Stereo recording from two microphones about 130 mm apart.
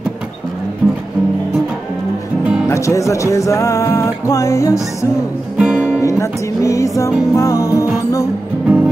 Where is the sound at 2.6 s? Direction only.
25° left (ahead or behind).